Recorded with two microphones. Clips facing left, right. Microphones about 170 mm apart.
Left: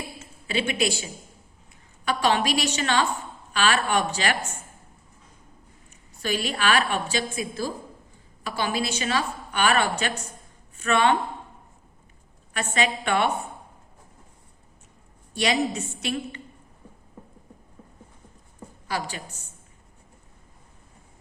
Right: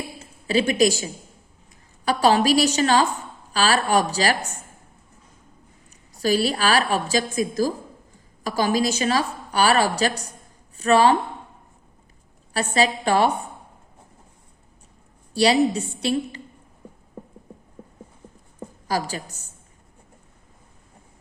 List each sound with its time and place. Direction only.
0.2 s a woman's voice: 40° right (ahead or behind)
6.1 s a woman's voice: 35° right (ahead or behind)
12.5 s a woman's voice: 35° right (ahead or behind)
15.3 s a woman's voice: 35° right (ahead or behind)
18.9 s a woman's voice: 40° right (ahead or behind)